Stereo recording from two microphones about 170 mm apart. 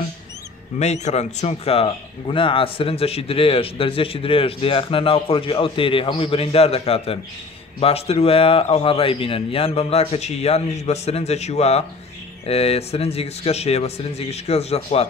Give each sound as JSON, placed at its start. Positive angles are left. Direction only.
{"t": 0.7, "sound": "a man's voice", "side_deg": 40}